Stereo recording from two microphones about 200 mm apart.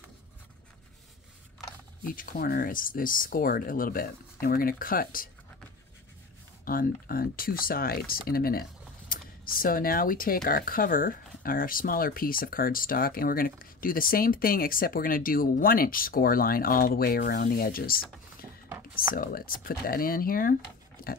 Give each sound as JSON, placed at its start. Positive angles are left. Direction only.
{"t": 2.1, "sound": "speech", "side_deg": 45}
{"t": 6.6, "sound": "speech", "side_deg": 45}
{"t": 18.4, "sound": "a sound", "side_deg": -10}
{"t": 18.9, "sound": "speech", "side_deg": 45}